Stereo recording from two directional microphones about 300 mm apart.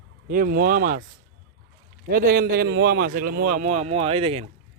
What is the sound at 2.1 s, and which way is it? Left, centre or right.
A man's voice, right.